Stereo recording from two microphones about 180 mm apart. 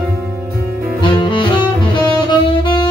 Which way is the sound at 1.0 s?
25° left (ahead or behind).